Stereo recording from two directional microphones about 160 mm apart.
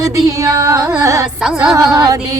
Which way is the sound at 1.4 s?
5° right (ahead or behind).